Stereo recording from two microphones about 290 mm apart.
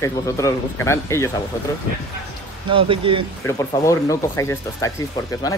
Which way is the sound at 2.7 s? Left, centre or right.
Centre.